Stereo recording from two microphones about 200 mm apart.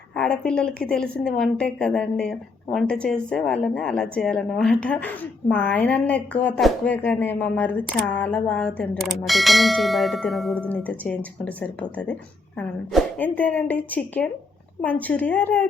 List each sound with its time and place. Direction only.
0.2 s a woman's voice: 5° left (ahead or behind)